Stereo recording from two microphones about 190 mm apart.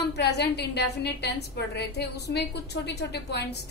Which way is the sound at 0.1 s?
60° left (ahead or behind).